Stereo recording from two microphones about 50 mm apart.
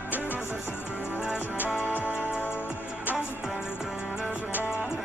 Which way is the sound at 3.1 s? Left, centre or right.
Right.